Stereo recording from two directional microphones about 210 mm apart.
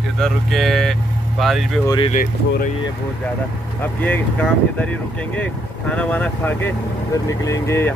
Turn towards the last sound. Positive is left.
turn(degrees=10)  # may be behind; listen again after turning